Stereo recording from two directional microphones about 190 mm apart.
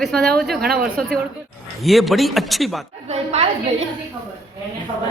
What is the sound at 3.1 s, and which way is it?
Speech, 35° right (ahead or behind).